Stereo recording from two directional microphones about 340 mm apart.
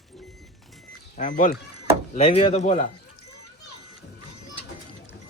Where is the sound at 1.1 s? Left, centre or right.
Left.